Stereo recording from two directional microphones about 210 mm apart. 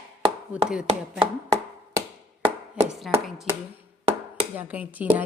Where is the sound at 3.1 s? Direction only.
Centre (ahead or behind).